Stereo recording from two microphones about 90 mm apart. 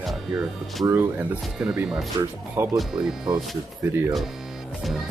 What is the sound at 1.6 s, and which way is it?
Speech, 5° right (ahead or behind).